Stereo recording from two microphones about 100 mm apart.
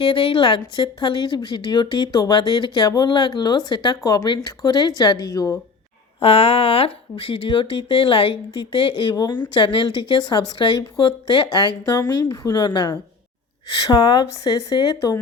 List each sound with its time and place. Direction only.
0.0 s a woman's voice: 65° left (ahead or behind); by 5.5 s 35° left (ahead or behind)
6.1 s speech: 75° left (ahead or behind); by 9.1 s 60° left (ahead or behind)
9.1 s a woman's voice: 45° left (ahead or behind)
11.9 s a woman's voice: 40° left (ahead or behind)